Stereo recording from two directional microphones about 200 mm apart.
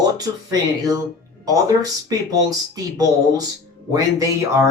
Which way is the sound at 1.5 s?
15° right (ahead or behind).